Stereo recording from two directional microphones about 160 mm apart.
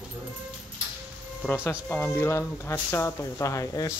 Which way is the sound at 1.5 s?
15° left (ahead or behind).